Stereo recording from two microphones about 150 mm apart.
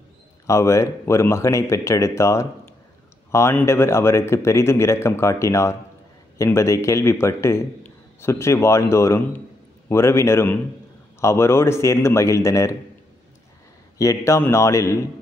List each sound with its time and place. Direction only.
0.5 s a man's voice: 20° left (ahead or behind)
13.9 s a man's voice: 20° left (ahead or behind)